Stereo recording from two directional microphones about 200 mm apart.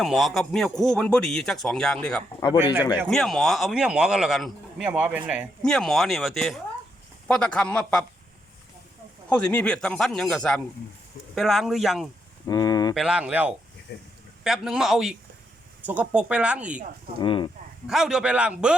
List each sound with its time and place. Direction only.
0.0 s speech: centre (ahead or behind)
9.3 s speech: 5° left (ahead or behind)
12.5 s a sound: 20° left (ahead or behind)
12.9 s speech: 5° right (ahead or behind)
13.9 s speech: 55° left (ahead or behind)
14.4 s speech: centre (ahead or behind)
17.2 s speech: 25° left (ahead or behind)
17.8 s speech: 5° right (ahead or behind)